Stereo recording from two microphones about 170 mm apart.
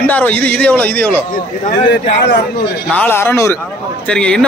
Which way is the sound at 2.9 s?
10° left (ahead or behind).